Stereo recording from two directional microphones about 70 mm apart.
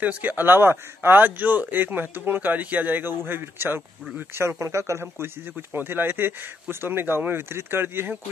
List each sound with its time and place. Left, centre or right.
0.0 s speech: right